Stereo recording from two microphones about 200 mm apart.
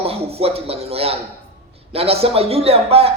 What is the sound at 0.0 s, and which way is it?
A man's voice, 30° right (ahead or behind).